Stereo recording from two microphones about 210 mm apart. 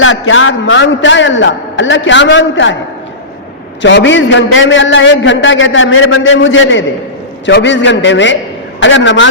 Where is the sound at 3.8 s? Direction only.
60° left (ahead or behind).